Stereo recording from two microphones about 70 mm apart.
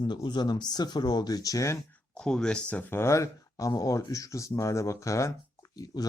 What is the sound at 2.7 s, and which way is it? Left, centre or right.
Speech, left.